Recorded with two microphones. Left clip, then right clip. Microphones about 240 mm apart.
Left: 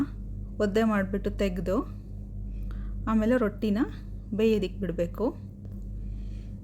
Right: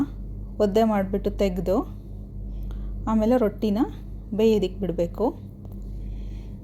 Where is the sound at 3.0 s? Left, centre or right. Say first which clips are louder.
Right 4 dB; centre.